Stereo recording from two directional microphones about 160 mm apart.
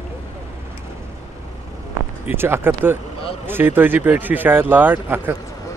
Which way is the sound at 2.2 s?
15° right (ahead or behind).